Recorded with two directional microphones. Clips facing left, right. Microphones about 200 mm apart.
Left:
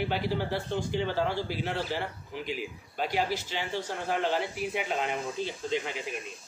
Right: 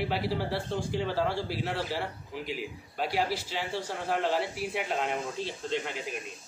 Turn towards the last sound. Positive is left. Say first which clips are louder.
# left 1 dB
turn(degrees=0)  # may be behind; listen again after turning